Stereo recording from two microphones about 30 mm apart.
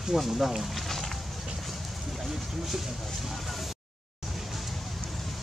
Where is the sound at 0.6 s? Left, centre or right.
Centre.